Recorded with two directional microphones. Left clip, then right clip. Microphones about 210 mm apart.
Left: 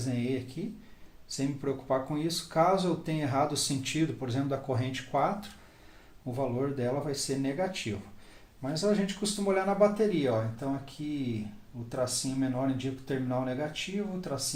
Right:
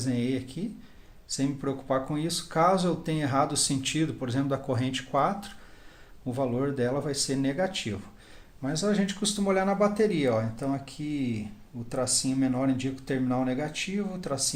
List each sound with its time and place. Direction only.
0.0 s speech: 35° right (ahead or behind)